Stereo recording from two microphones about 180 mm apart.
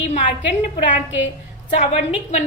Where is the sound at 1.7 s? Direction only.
40° left (ahead or behind).